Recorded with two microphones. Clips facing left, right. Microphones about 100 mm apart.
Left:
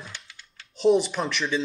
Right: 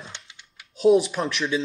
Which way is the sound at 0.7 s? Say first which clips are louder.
Right 2 dB; 5° right (ahead or behind).